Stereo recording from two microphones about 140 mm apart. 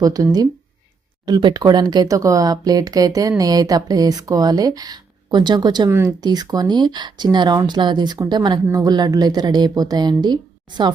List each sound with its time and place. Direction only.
0.0 s speech: 25° right (ahead or behind)
5.9 s speech: 20° right (ahead or behind)